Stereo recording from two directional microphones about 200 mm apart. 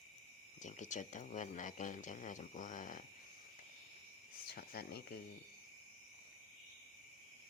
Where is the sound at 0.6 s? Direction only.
35° left (ahead or behind).